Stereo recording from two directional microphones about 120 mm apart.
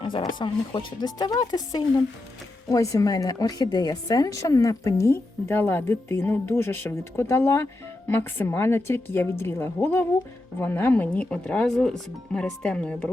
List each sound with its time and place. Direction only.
0.0 s a woman's voice: 40° left (ahead or behind); by 13.1 s 10° left (ahead or behind)